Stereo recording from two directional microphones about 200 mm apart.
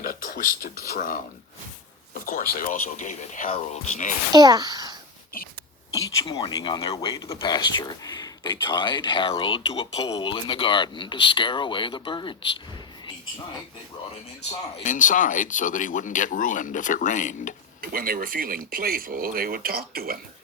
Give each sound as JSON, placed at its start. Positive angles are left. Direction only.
{"t": 0.0, "sound": "speech", "side_deg": 45}
{"t": 4.3, "sound": "a child's voice", "side_deg": -20}
{"t": 5.9, "sound": "speech", "side_deg": 20}
{"t": 14.8, "sound": "speech", "side_deg": 40}
{"t": 17.7, "sound": "speech", "side_deg": -45}